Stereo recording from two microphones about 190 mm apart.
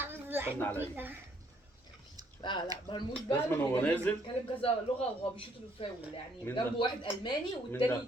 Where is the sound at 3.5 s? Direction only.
10° left (ahead or behind).